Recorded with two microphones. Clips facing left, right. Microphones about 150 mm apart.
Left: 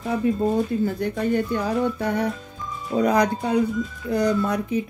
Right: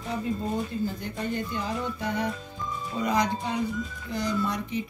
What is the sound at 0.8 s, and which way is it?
Music, 55° left (ahead or behind).